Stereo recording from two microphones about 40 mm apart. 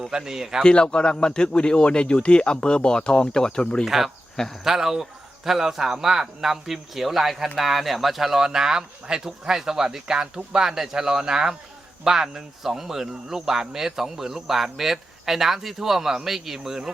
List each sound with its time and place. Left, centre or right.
0.1 s speech: centre
0.6 s a man's voice: left
3.8 s speech: centre